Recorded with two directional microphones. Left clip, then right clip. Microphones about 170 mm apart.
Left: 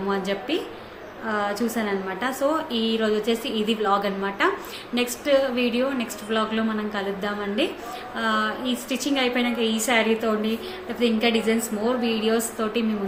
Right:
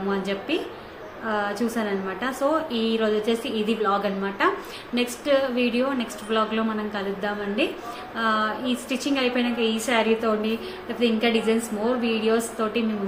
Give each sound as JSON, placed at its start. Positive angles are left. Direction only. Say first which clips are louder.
{"t": 0.1, "sound": "a woman's voice", "louder": "left 1 dB", "side_deg": 5}